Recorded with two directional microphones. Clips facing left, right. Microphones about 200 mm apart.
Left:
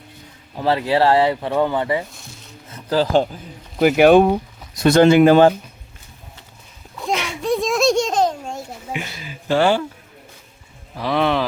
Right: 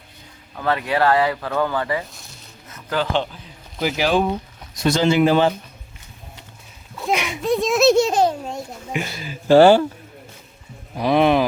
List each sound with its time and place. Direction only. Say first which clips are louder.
0.5 s speech: left 3 dB; 30° left (ahead or behind)
2.7 s speech: left 5 dB; 35° left (ahead or behind)
3.8 s speech: left 8 dB; 60° left (ahead or behind)
7.1 s a sound: right 1 dB; 15° right (ahead or behind)
7.4 s children playing: right 2 dB; centre (ahead or behind)
8.9 s speech: right 3 dB; 40° right (ahead or behind)
10.9 s speech: right 3 dB; 20° right (ahead or behind)